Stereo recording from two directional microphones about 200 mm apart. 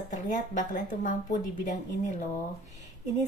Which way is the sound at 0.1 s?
40° left (ahead or behind).